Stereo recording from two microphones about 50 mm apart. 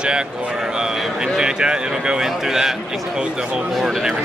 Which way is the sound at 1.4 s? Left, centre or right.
Centre.